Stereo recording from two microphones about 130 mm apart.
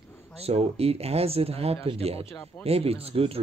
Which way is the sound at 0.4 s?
50° right (ahead or behind).